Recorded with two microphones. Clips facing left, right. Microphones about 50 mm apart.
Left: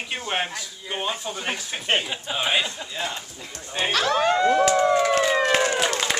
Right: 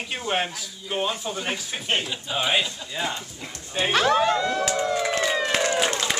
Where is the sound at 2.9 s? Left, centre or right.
Centre.